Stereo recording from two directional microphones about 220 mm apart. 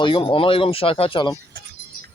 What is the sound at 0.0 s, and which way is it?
Speech, 25° left (ahead or behind).